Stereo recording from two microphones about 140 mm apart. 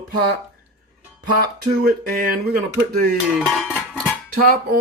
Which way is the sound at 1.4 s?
90° right.